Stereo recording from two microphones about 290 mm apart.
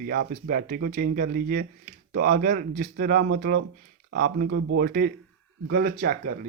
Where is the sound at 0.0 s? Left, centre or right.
Right.